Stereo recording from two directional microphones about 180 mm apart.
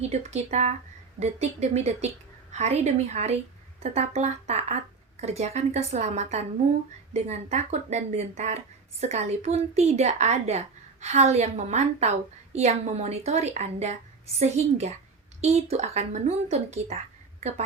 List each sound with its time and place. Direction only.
0.1 s speech: 35° right (ahead or behind)